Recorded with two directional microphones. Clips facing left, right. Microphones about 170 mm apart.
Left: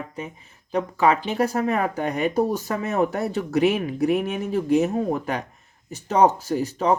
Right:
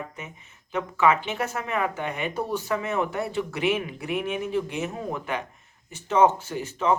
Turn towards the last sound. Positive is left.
turn(degrees=40)  # may be behind; listen again after turning